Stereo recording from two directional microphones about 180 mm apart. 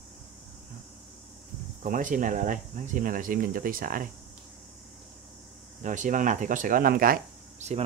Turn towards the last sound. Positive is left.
turn(degrees=-50)  # may be behind; listen again after turning